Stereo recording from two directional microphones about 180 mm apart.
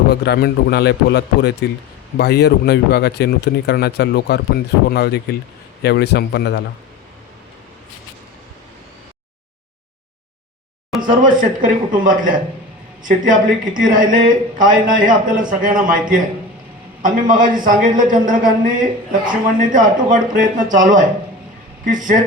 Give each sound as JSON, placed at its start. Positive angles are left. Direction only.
{"t": 0.1, "sound": "a man's voice", "side_deg": 60}
{"t": 11.0, "sound": "a man's voice", "side_deg": -50}